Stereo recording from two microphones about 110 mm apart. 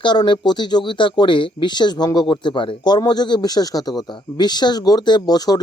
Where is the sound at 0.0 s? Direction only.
45° left (ahead or behind).